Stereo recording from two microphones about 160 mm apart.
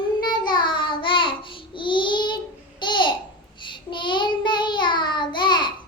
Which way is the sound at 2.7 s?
30° left (ahead or behind).